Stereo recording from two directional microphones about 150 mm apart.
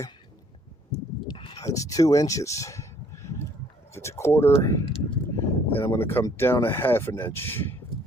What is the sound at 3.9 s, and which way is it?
Speech, 20° left (ahead or behind).